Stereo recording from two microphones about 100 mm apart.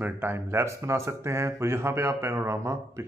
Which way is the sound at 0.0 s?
20° right (ahead or behind).